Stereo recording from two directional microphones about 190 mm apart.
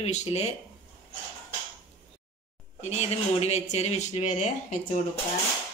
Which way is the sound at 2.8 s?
35° left (ahead or behind).